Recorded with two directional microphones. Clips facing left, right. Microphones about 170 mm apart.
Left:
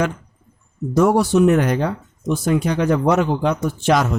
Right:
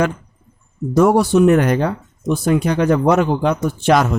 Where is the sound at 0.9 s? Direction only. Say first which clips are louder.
Right 2 dB; 55° right (ahead or behind).